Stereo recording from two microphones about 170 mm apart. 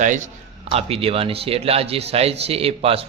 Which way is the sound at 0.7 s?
35° right (ahead or behind).